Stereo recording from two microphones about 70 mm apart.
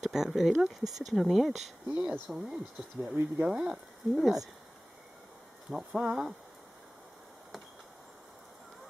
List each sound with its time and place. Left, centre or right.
0.0 s speech: centre
2.0 s speech: right
2.3 s speech: centre
5.7 s speech: centre